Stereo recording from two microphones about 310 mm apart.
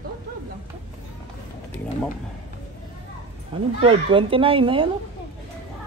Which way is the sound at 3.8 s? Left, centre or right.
Centre.